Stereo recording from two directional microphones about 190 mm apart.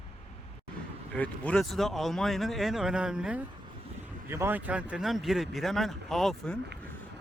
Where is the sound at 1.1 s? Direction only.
10° left (ahead or behind).